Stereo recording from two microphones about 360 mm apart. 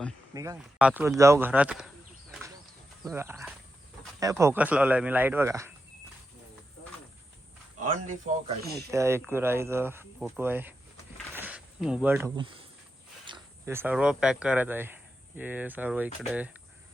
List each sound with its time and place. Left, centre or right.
0.3 s speech: centre
3.0 s speech: centre
7.8 s speech: right
8.9 s speech: centre
11.3 s cricket: centre
13.2 s speech: centre